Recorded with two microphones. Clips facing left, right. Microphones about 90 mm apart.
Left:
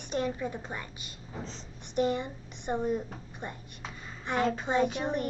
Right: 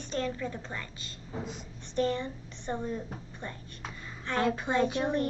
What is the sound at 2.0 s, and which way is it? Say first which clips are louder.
A woman's voice: left 1 dB; 15° left (ahead or behind).